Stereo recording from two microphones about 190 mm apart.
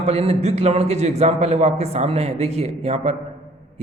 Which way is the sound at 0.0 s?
35° right (ahead or behind).